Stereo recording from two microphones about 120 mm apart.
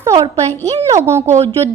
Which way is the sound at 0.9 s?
20° right (ahead or behind).